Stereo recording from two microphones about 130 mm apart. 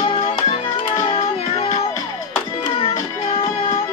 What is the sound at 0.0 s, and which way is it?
Music, 45° left (ahead or behind).